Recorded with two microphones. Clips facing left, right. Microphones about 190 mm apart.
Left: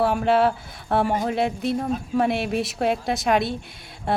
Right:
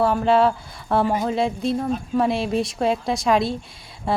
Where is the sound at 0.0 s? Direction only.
Centre (ahead or behind).